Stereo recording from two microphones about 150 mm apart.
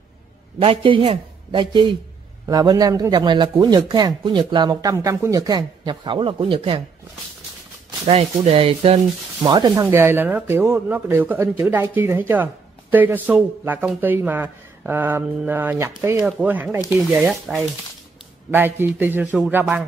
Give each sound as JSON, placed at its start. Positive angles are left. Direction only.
{"t": 0.6, "sound": "a man's voice", "side_deg": -35}
{"t": 8.1, "sound": "a man's voice", "side_deg": -45}
{"t": 9.8, "sound": "a man's voice", "side_deg": -15}
{"t": 18.5, "sound": "a man's voice", "side_deg": -15}